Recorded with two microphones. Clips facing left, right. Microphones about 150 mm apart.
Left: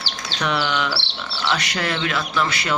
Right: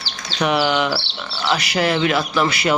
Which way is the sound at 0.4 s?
10° right (ahead or behind).